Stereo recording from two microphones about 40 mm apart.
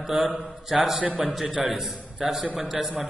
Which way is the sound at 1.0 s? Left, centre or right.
Right.